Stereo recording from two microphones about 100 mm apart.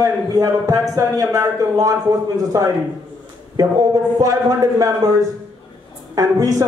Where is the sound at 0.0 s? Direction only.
35° right (ahead or behind).